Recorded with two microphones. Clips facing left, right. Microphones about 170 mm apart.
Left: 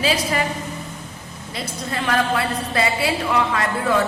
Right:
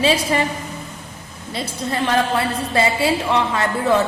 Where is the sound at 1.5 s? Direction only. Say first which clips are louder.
Right 4 dB; 30° right (ahead or behind).